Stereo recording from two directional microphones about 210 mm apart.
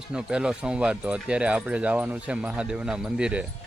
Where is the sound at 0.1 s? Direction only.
5° right (ahead or behind).